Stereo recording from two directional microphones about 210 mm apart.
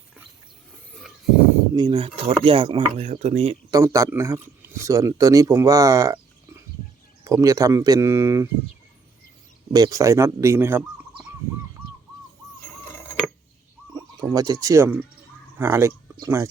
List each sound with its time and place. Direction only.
0.9 s a sound: 5° left (ahead or behind)
1.7 s speech: 20° right (ahead or behind)
3.7 s speech: 15° right (ahead or behind)
9.7 s speech: 15° right (ahead or behind)
12.6 s a sound: 10° left (ahead or behind)
13.9 s speech: 15° right (ahead or behind)